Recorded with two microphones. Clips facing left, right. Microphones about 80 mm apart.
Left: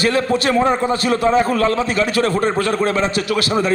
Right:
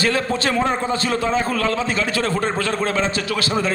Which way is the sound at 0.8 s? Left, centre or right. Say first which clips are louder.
Left 4 dB; right.